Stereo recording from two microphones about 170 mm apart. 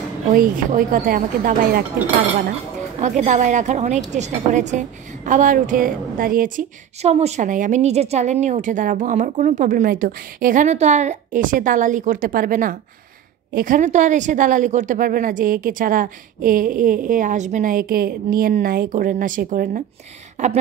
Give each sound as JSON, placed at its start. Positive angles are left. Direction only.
{"t": 0.3, "sound": "a woman's voice", "side_deg": -55}
{"t": 3.0, "sound": "a woman's voice", "side_deg": -45}